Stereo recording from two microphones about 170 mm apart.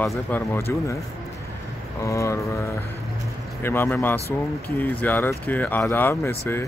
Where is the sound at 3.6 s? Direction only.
15° left (ahead or behind).